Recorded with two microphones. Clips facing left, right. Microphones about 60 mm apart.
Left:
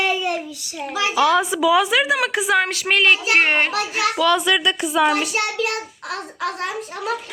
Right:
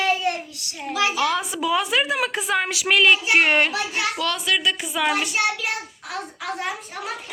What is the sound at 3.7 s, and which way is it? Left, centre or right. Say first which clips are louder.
Speech: left 4 dB; left.